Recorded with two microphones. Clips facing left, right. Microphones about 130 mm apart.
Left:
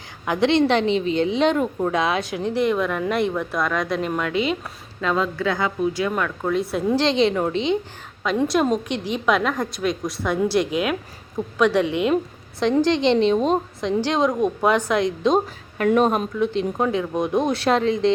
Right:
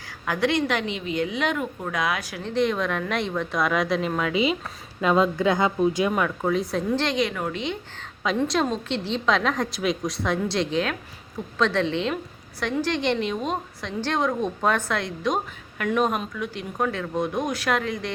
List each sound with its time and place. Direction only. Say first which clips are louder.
0.3 s speech: left 5 dB; 20° left (ahead or behind)
2.5 s a woman's voice: left 2 dB; 10° left (ahead or behind)
4.9 s speech: right 2 dB; 15° right (ahead or behind)
6.1 s a woman's voice: left 1 dB; 5° right (ahead or behind)
7.0 s speech: left 6 dB; 25° left (ahead or behind)
8.4 s a woman's voice: left 4 dB; 10° left (ahead or behind); by 13.6 s 30° left (ahead or behind)
13.8 s a woman's voice: left 4 dB; 15° left (ahead or behind)
15.8 s speech: left 5 dB; 35° left (ahead or behind)